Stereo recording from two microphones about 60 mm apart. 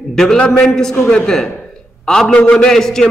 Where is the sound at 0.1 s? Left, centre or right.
Centre.